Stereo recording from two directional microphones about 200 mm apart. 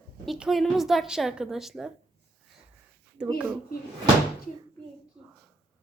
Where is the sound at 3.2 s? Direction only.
5° right (ahead or behind).